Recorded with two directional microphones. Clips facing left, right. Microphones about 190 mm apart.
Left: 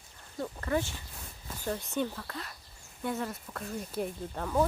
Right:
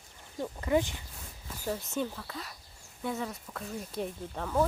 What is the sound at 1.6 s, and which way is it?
Speech, 5° right (ahead or behind).